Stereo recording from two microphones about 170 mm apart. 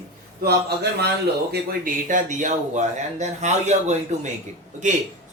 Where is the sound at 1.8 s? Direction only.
50° right (ahead or behind).